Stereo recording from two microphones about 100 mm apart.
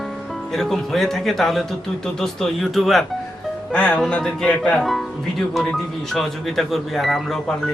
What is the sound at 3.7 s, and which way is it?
Speech, 15° left (ahead or behind).